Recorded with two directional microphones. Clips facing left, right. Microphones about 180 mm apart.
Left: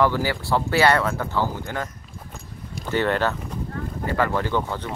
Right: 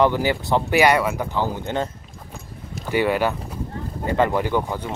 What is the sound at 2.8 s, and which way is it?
Speech, 10° right (ahead or behind).